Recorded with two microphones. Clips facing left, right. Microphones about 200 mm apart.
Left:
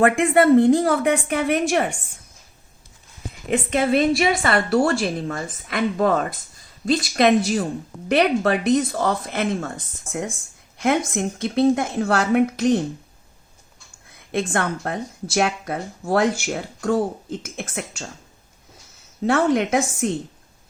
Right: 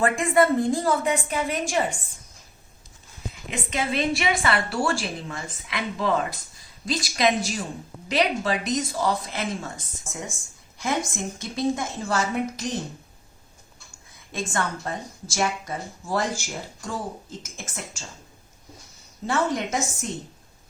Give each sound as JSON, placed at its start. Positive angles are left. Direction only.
{"t": 0.0, "sound": "speech", "side_deg": 65}
{"t": 3.5, "sound": "speech", "side_deg": 55}
{"t": 14.3, "sound": "speech", "side_deg": 60}
{"t": 19.2, "sound": "speech", "side_deg": 65}